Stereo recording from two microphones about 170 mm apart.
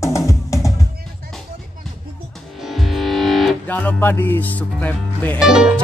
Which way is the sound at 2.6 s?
Centre (ahead or behind).